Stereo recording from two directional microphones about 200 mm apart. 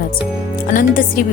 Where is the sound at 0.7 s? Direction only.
45° left (ahead or behind).